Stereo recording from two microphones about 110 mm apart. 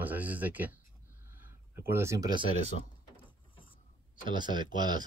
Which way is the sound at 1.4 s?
20° right (ahead or behind).